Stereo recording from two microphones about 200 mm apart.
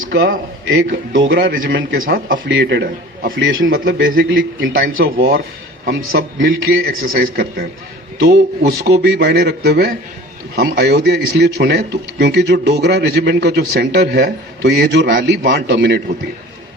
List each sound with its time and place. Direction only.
0.7 s a man's voice: 75° right (ahead or behind)
1.5 s speech: 45° right (ahead or behind)
2.5 s a man's voice: 65° right (ahead or behind)
3.3 s a man's voice: 70° right (ahead or behind)
3.7 s speech: 50° right (ahead or behind)
6.1 s a man's voice: 65° right (ahead or behind)
7.0 s speech: 45° right (ahead or behind)